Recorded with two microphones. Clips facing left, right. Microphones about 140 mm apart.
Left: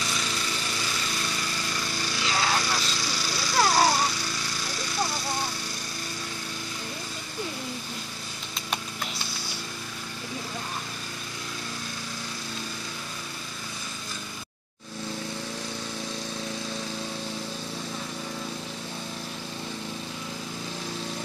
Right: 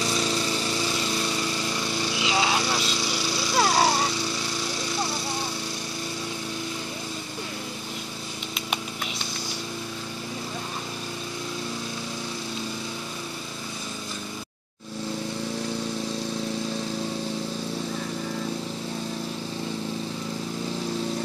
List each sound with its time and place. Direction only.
0.0 s lawn mower: 30° right (ahead or behind)